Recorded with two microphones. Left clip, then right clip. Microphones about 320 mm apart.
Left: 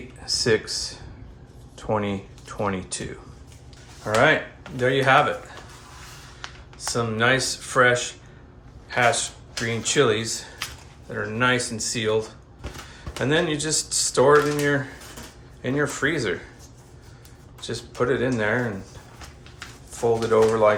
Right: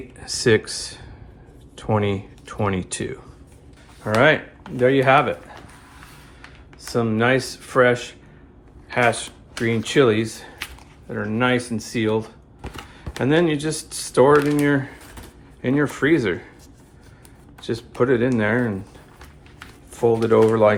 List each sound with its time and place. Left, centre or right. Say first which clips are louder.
0.2 s speech: right 3 dB; right
6.7 s speech: right 3 dB; centre
17.6 s speech: right 4 dB; right
19.9 s speech: right 3 dB; right